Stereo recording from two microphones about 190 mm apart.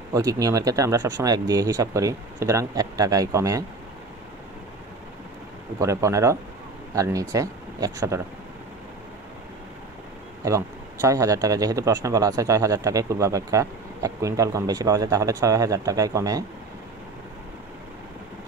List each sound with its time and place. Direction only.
0.1 s speech: 20° right (ahead or behind)
5.8 s speech: 15° right (ahead or behind)
10.4 s speech: 15° right (ahead or behind)